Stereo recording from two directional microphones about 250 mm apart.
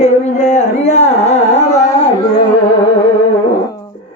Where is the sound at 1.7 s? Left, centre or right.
Centre.